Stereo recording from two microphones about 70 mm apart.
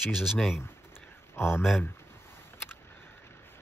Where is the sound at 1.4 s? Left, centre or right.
Left.